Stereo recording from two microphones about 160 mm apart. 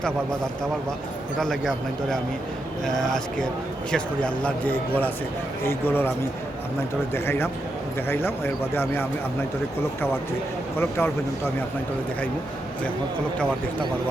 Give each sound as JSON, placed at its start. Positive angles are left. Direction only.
{"t": 1.4, "sound": "a man's voice", "side_deg": 5}
{"t": 7.1, "sound": "speech", "side_deg": 15}
{"t": 10.8, "sound": "speech", "side_deg": 15}